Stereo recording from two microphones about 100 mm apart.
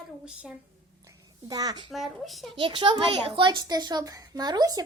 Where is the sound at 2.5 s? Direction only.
55° right (ahead or behind); by 4.8 s 40° right (ahead or behind).